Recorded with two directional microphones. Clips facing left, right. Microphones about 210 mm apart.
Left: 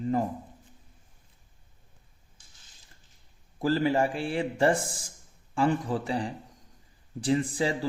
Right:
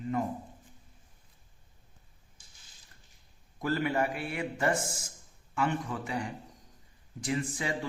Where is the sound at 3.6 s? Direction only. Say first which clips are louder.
Left 5 dB; 30° left (ahead or behind).